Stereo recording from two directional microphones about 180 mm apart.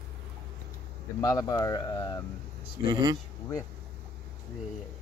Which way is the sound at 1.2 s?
20° left (ahead or behind).